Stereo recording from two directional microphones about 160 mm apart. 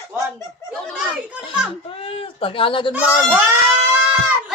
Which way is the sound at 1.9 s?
35° left (ahead or behind).